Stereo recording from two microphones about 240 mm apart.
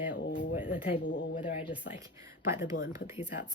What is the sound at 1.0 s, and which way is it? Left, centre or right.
Speech, left.